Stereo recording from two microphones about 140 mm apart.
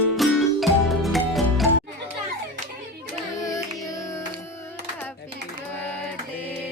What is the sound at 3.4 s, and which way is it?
Singing, 25° left (ahead or behind).